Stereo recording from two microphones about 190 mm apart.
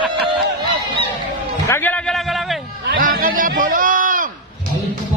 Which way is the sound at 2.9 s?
50° right (ahead or behind).